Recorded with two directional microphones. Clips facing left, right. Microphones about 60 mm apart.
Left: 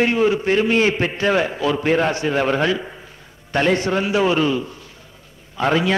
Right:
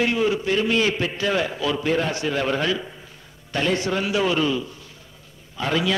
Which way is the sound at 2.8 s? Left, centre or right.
Left.